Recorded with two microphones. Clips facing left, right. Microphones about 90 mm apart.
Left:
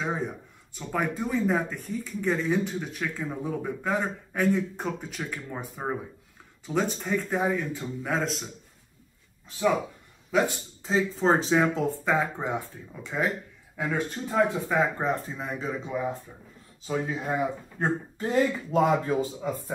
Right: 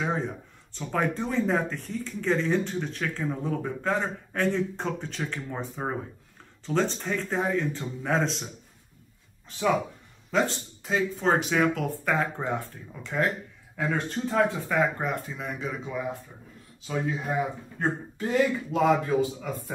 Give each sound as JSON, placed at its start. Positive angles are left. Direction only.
{"t": 0.0, "sound": "a sound", "side_deg": 10}
{"t": 0.7, "sound": "speech", "side_deg": 10}
{"t": 6.6, "sound": "speech", "side_deg": 10}
{"t": 10.8, "sound": "speech", "side_deg": 30}
{"t": 13.8, "sound": "speech", "side_deg": 5}
{"t": 14.5, "sound": "speech", "side_deg": 20}
{"t": 15.0, "sound": "speech", "side_deg": 35}
{"t": 17.3, "sound": "speech", "side_deg": 35}